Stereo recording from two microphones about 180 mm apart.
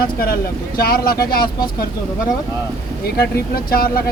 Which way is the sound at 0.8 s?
55° left (ahead or behind).